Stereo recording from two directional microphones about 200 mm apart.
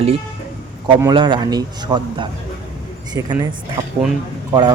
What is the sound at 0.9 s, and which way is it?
A man's voice, 20° right (ahead or behind).